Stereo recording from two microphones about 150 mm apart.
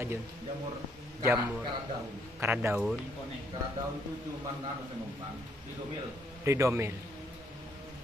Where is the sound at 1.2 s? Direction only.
10° right (ahead or behind).